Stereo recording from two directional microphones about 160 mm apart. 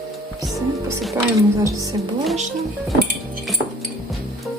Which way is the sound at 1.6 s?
20° right (ahead or behind).